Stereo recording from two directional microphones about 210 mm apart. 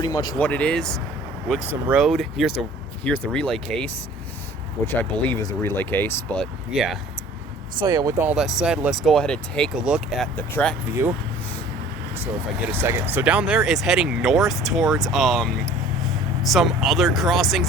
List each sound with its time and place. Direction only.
0.0 s speech: 20° left (ahead or behind)
0.3 s speech: 5° left (ahead or behind)
7.8 s speech: 15° right (ahead or behind)
10.3 s speech: 5° left (ahead or behind)
12.7 s speech: 10° right (ahead or behind)